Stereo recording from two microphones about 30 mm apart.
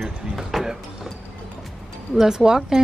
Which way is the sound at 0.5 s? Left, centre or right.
Centre.